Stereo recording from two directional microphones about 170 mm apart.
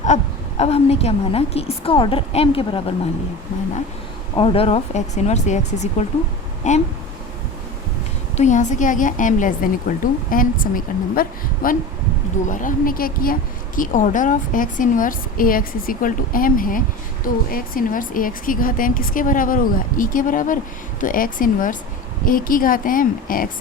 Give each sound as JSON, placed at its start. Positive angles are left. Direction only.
{"t": 0.0, "sound": "a woman's voice", "side_deg": 40}
{"t": 4.4, "sound": "a woman's voice", "side_deg": 35}
{"t": 8.4, "sound": "a woman's voice", "side_deg": 45}